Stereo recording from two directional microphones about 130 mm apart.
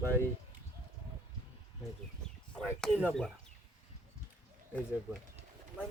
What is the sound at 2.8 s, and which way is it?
Speech, 5° left (ahead or behind).